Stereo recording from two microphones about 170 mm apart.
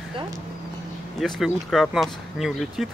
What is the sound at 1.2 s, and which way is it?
Speech, centre (ahead or behind).